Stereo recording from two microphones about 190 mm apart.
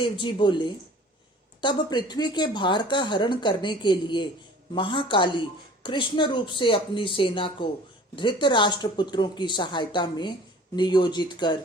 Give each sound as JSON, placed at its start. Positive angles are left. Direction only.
{"t": 0.0, "sound": "speech", "side_deg": 25}